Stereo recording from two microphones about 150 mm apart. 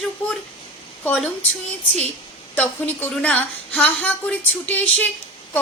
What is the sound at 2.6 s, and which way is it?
Speech, 10° left (ahead or behind).